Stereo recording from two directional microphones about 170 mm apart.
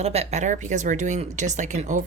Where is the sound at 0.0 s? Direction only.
40° right (ahead or behind).